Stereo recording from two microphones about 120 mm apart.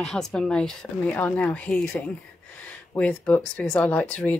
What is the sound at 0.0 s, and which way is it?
Speech, 5° left (ahead or behind).